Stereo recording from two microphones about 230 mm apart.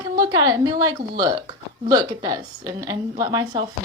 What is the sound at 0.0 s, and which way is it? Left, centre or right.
A woman's voice, centre.